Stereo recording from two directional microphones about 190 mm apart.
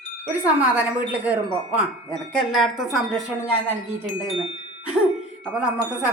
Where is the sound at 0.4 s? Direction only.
5° right (ahead or behind).